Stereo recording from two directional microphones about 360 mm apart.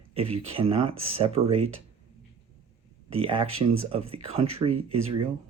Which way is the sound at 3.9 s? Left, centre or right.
Centre.